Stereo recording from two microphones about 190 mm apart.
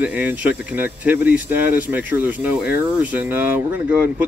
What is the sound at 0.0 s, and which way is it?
Speech, 5° right (ahead or behind).